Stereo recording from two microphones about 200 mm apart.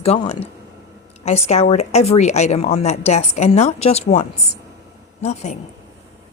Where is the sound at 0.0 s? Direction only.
30° left (ahead or behind).